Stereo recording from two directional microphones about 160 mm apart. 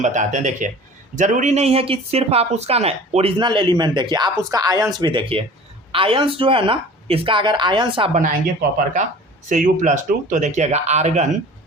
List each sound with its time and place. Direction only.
0.0 s speech: 50° right (ahead or behind); by 8.1 s 35° right (ahead or behind)
8.1 s speech: 50° right (ahead or behind)
9.5 s speech: 55° right (ahead or behind)